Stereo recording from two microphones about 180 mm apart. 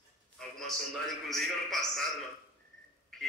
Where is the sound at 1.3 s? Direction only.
Centre (ahead or behind).